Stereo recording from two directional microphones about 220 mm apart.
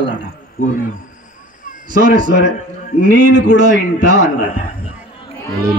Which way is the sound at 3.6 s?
35° right (ahead or behind).